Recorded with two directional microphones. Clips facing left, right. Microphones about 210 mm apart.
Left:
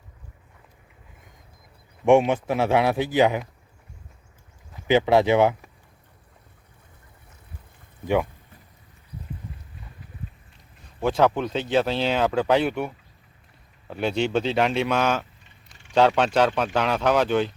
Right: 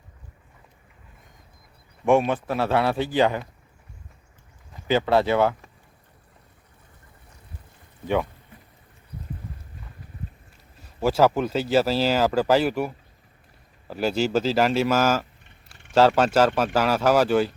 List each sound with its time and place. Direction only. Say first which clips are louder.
2.0 s a man's voice: left 2 dB; 20° left (ahead or behind)
4.9 s a man's voice: left 2 dB; 15° left (ahead or behind)
8.0 s a man's voice: left 1 dB; 15° left (ahead or behind)
11.0 s speech: right 1 dB; 5° right (ahead or behind)